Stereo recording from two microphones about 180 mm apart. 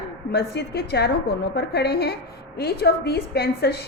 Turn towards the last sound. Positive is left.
turn(degrees=60)  # may be behind; listen again after turning